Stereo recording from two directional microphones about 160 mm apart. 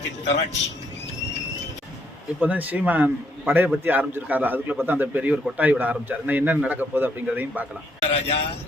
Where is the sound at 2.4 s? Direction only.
10° right (ahead or behind).